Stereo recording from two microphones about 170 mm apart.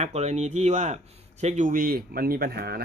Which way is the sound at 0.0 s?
40° right (ahead or behind).